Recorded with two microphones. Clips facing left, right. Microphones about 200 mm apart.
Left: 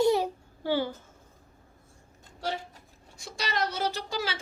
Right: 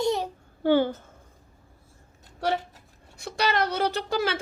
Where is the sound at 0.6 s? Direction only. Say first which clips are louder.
Right 7 dB; 55° right (ahead or behind).